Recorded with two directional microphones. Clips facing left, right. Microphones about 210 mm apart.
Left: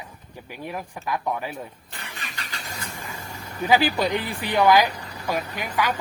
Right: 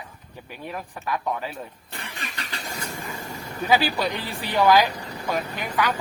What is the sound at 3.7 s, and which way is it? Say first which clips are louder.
Speech: left 2 dB; 15° left (ahead or behind).